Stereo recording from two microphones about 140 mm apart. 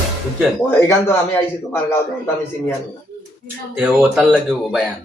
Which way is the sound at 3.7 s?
5° right (ahead or behind).